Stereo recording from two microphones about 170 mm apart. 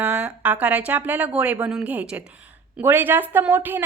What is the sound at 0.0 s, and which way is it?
A woman's voice, 5° right (ahead or behind).